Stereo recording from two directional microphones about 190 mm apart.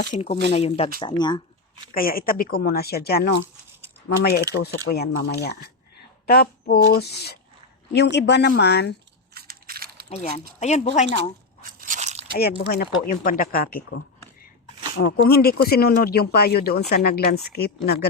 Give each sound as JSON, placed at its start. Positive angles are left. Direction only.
{"t": 0.1, "sound": "speech", "side_deg": 35}
{"t": 1.9, "sound": "speech", "side_deg": 50}
{"t": 9.3, "sound": "a sound", "side_deg": -55}
{"t": 10.1, "sound": "speech", "side_deg": 35}
{"t": 11.8, "sound": "crunch", "side_deg": -40}
{"t": 12.3, "sound": "speech", "side_deg": 55}